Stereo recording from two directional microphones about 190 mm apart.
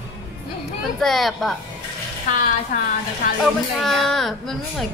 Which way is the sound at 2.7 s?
40° left (ahead or behind).